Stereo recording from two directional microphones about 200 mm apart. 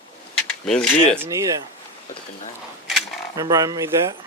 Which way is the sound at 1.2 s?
15° right (ahead or behind).